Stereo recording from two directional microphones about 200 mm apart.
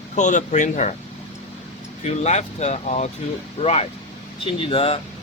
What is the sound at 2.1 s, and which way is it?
Speech, 35° left (ahead or behind).